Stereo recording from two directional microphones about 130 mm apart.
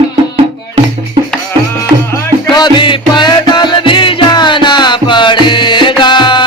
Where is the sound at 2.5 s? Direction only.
35° left (ahead or behind).